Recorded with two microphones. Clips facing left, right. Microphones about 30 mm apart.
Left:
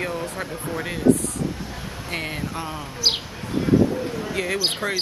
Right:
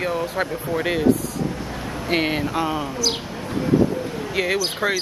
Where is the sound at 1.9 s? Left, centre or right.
Right.